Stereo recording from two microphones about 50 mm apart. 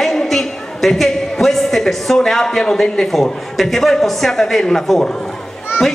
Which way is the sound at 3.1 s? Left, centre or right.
Centre.